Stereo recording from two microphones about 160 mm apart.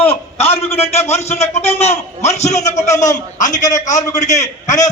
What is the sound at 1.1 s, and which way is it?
A man's voice, 40° left (ahead or behind).